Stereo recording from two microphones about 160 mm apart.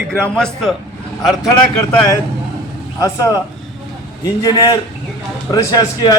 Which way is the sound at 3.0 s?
20° left (ahead or behind).